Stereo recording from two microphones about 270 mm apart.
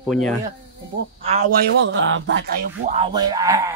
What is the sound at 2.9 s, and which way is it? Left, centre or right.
Speech, centre.